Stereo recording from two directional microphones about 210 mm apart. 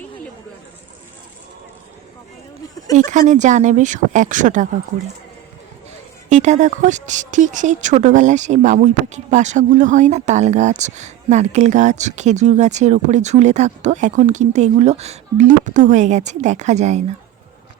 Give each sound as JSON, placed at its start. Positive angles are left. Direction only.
{"t": 3.1, "sound": "speech", "side_deg": -35}
{"t": 6.2, "sound": "speech", "side_deg": -35}